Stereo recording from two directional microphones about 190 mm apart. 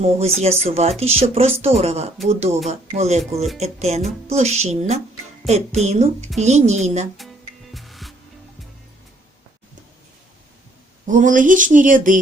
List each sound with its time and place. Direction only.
0.0 s speech: 35° right (ahead or behind)
7.2 s music: centre (ahead or behind)
11.0 s speech: 40° right (ahead or behind)